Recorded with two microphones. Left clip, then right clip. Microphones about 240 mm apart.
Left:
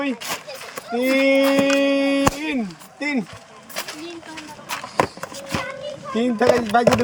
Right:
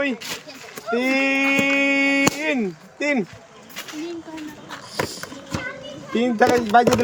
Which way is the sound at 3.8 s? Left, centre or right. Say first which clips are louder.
Left 5 dB; left.